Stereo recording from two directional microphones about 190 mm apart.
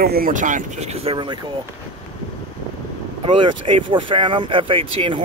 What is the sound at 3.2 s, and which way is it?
Speech, 25° right (ahead or behind).